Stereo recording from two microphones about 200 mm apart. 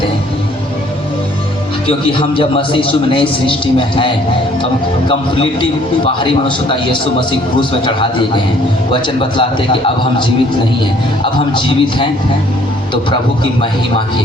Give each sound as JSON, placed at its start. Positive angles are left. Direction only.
{"t": 1.9, "sound": "a man's voice", "side_deg": 25}
{"t": 9.4, "sound": "a man's voice", "side_deg": 25}